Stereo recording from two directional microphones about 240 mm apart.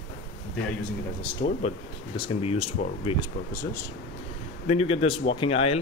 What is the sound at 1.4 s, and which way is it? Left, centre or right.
Speech, left.